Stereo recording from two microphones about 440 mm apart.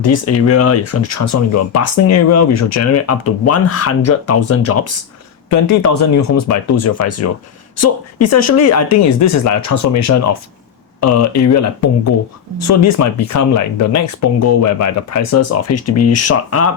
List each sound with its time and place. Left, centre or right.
0.0 s speech: left